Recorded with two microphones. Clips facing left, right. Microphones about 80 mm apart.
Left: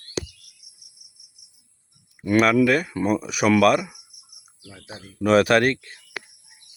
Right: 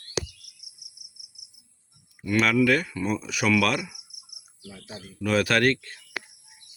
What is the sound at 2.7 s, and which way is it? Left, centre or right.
Speech, centre.